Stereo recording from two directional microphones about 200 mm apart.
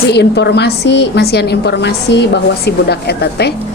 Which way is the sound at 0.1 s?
55° left (ahead or behind).